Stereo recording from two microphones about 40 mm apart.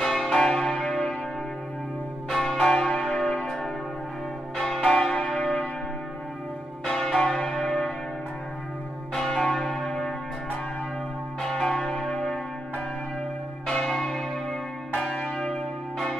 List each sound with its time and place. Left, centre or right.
0.0 s church bell: centre
2.3 s church bell: centre
6.9 s church bell: centre
9.1 s church bell: centre
11.6 s church bell: centre
13.8 s church bell: centre